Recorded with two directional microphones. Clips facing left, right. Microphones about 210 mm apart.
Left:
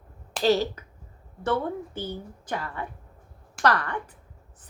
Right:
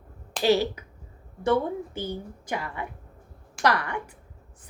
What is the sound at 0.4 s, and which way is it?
A woman's voice, 10° right (ahead or behind).